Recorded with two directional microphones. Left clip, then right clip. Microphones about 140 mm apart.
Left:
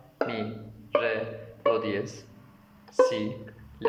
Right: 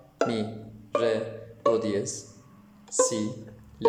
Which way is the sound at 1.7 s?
45° right (ahead or behind).